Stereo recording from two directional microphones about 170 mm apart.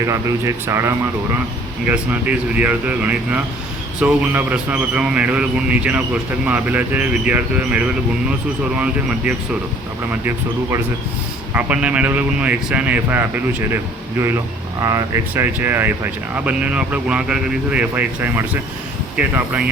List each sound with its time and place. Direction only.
0.0 s speech: 15° right (ahead or behind)
11.5 s speech: 5° right (ahead or behind)